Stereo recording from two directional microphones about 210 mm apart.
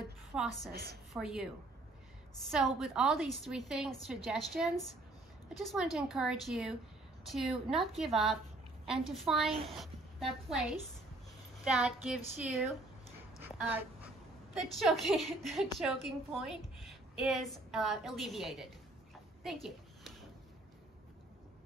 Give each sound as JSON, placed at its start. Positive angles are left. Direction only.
{"t": 0.3, "sound": "a woman's voice", "side_deg": 0}
{"t": 0.7, "sound": "a woman's voice", "side_deg": -50}
{"t": 1.1, "sound": "a woman's voice", "side_deg": 0}
{"t": 9.5, "sound": "speech", "side_deg": -30}
{"t": 9.8, "sound": "a woman's voice", "side_deg": 0}
{"t": 13.4, "sound": "a sound", "side_deg": -5}
{"t": 14.6, "sound": "a woman's voice", "side_deg": 0}
{"t": 19.4, "sound": "a sound", "side_deg": 0}